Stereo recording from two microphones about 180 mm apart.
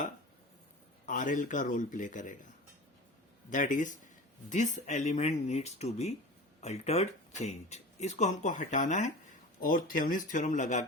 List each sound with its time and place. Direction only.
1.0 s speech: 45° left (ahead or behind)
3.5 s speech: 45° left (ahead or behind)